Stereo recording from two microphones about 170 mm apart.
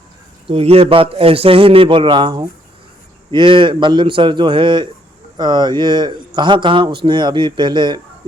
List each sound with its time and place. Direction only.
0.4 s a man's voice: 35° right (ahead or behind)